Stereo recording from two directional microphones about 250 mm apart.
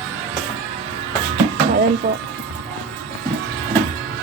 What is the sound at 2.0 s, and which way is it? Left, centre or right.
Speech, right.